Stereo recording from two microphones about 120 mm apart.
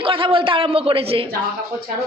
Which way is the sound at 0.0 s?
45° right (ahead or behind).